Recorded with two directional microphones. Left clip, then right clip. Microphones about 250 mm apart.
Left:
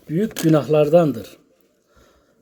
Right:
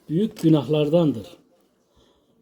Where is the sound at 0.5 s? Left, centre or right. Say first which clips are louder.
Left 7 dB; centre.